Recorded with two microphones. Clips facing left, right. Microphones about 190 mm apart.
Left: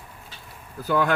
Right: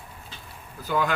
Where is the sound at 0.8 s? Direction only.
60° left (ahead or behind).